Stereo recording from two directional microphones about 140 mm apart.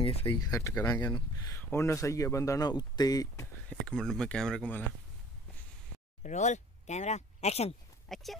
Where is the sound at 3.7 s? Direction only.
5° left (ahead or behind).